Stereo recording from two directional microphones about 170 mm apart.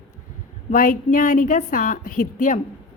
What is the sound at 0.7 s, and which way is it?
A woman's voice, 50° left (ahead or behind).